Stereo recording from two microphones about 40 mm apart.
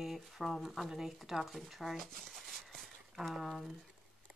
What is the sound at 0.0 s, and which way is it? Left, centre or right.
Speech, centre.